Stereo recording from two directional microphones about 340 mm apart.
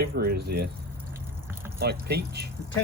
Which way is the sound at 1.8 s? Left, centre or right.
Right.